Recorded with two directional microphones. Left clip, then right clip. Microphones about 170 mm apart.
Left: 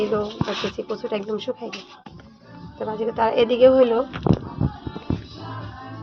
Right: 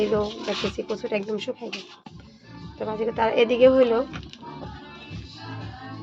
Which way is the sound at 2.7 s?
5° right (ahead or behind).